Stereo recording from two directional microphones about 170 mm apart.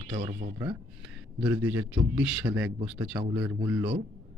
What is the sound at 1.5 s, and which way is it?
A man's voice, 15° right (ahead or behind).